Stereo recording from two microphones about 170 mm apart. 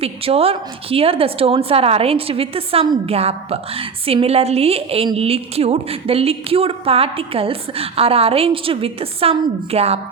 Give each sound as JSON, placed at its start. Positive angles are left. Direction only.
{"t": 0.0, "sound": "a woman's voice", "side_deg": -35}